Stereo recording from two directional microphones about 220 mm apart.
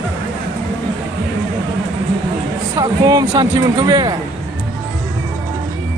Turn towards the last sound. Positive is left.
turn(degrees=-20)  # may be behind; listen again after turning